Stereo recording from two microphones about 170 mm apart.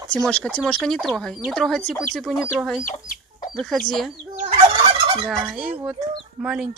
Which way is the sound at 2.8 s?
50° left (ahead or behind).